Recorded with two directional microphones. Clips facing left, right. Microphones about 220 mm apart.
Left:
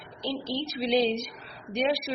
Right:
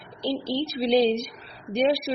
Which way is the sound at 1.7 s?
30° right (ahead or behind).